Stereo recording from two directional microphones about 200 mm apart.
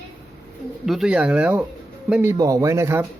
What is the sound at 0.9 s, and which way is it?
Speech, centre (ahead or behind).